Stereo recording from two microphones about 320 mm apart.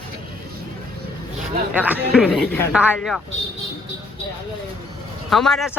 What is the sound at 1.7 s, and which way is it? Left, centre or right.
A man's voice, centre.